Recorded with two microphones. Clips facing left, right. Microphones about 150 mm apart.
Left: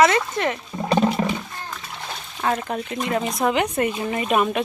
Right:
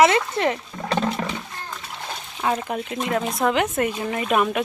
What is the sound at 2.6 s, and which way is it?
Speech, 5° right (ahead or behind).